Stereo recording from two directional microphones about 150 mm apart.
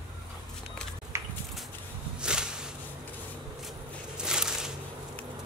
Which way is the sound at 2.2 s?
5° right (ahead or behind).